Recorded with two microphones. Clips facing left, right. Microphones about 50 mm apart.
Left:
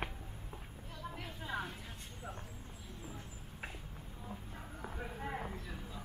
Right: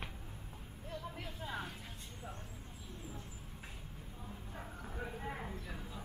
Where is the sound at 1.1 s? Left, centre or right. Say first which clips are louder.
Left 6 dB; centre.